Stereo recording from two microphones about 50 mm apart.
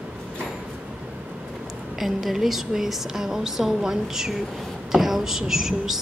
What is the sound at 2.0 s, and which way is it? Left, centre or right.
A woman's voice, centre.